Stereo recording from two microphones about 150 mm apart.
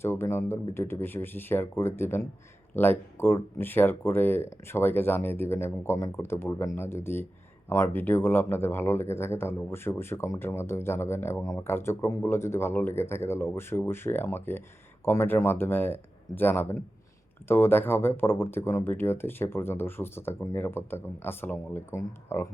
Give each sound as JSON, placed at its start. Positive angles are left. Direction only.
{"t": 0.0, "sound": "speech", "side_deg": 15}